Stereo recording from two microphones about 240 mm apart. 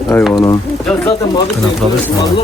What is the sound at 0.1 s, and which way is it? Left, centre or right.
Speech, centre.